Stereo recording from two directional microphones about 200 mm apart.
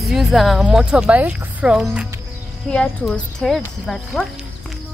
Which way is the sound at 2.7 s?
5° left (ahead or behind).